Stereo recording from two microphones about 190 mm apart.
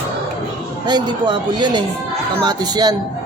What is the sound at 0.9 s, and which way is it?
Speech, 25° right (ahead or behind).